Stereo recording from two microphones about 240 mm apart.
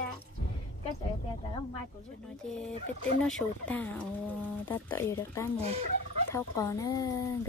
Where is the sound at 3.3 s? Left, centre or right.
Centre.